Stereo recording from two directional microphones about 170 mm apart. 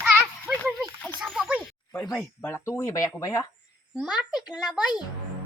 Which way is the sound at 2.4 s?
15° left (ahead or behind).